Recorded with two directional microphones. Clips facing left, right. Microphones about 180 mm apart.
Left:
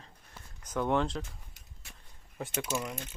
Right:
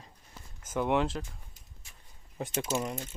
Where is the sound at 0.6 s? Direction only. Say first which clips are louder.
Right 1 dB; 5° right (ahead or behind).